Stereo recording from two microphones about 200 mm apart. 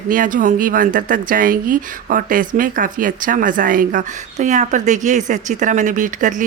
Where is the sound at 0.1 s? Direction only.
40° right (ahead or behind).